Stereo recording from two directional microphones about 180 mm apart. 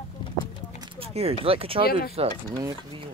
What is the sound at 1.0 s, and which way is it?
Speech, 35° right (ahead or behind).